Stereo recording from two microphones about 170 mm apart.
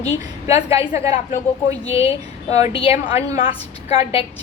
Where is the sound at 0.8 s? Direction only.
15° right (ahead or behind).